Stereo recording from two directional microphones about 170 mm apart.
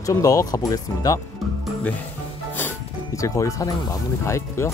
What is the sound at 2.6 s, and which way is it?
Music, 15° left (ahead or behind).